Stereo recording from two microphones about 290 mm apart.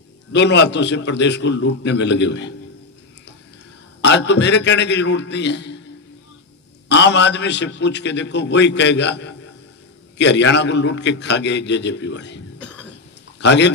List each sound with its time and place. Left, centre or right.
0.3 s a man's voice: left
4.0 s a man's voice: left
6.9 s a man's voice: left
12.5 s cough: centre
13.4 s speech: left